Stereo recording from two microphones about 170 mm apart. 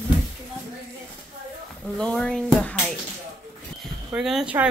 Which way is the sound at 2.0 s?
5° left (ahead or behind).